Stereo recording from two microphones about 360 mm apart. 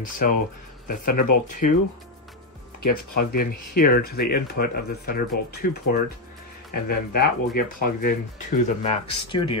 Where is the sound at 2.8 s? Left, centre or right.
Left.